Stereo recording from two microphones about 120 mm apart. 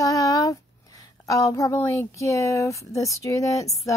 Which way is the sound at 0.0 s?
30° left (ahead or behind).